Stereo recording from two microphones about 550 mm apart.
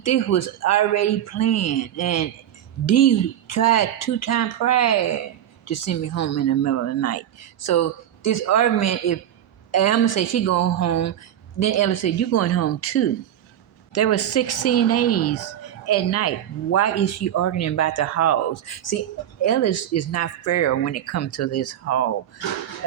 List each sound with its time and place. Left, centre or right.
0.0 s speech: left